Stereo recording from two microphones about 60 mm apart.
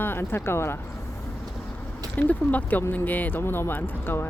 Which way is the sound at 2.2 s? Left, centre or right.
Left.